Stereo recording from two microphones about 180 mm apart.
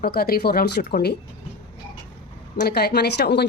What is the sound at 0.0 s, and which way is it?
Speech, 55° left (ahead or behind).